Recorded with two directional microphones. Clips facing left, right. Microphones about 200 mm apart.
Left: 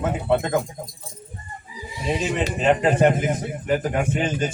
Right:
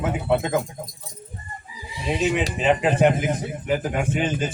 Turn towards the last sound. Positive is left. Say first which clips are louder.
# left 1 dB
turn(degrees=0)  # may be behind; listen again after turning